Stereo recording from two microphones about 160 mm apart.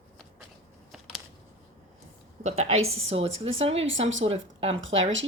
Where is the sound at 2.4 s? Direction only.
45° right (ahead or behind).